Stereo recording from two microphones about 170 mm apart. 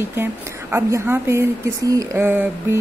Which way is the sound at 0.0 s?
15° right (ahead or behind).